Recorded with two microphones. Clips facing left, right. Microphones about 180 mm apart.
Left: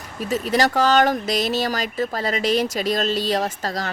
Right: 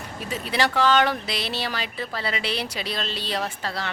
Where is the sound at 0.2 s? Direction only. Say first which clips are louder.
Left 6 dB; 40° left (ahead or behind).